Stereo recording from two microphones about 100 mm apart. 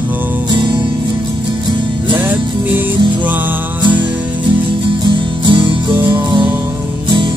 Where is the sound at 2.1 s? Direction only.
15° right (ahead or behind).